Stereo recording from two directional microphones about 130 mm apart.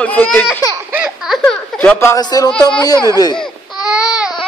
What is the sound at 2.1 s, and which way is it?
Speech, 30° left (ahead or behind).